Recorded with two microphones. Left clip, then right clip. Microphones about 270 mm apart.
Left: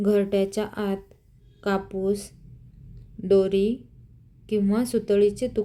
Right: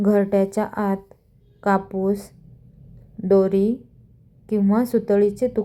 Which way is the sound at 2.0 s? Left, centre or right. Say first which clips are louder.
Right 3 dB; centre.